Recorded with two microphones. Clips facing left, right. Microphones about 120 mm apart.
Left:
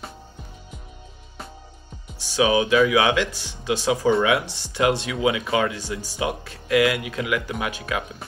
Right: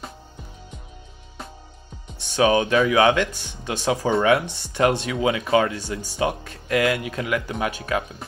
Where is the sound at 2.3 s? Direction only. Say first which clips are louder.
Even; 45° right (ahead or behind).